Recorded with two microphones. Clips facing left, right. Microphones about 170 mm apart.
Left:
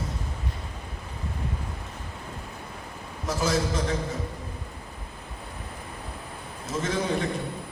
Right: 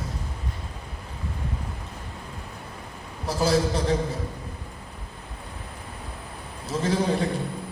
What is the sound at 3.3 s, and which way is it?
Speech, 35° right (ahead or behind).